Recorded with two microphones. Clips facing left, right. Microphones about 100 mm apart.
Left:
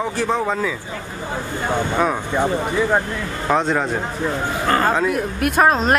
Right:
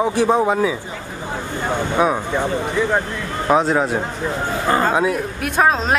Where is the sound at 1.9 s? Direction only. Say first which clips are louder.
Right 4 dB; 5° right (ahead or behind).